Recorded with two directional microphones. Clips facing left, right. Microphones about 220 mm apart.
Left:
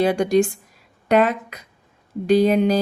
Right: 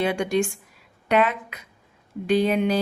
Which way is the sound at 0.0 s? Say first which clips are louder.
Left 5 dB; 40° left (ahead or behind).